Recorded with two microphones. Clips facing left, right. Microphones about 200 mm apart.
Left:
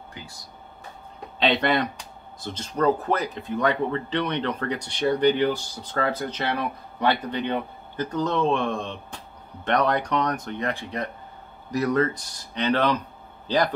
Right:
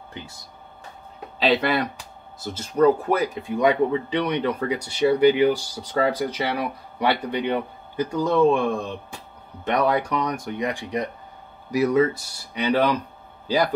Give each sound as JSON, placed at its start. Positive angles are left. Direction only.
{"t": 0.1, "sound": "speech", "side_deg": -25}
{"t": 1.4, "sound": "speech", "side_deg": -5}